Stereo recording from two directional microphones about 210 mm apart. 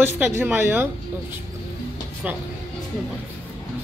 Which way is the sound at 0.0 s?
10° right (ahead or behind).